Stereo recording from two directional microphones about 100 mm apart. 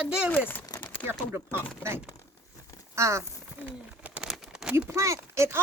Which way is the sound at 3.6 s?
15° right (ahead or behind).